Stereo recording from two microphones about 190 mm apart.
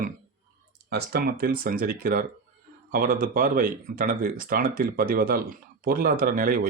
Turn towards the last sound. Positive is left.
turn(degrees=-50)  # may be behind; listen again after turning